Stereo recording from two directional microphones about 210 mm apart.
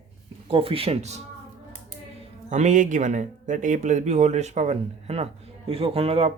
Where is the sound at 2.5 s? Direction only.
35° right (ahead or behind).